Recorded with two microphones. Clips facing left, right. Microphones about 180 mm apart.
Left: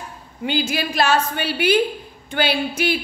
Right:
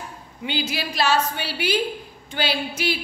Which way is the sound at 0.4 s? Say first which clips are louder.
Left 5 dB; 45° left (ahead or behind).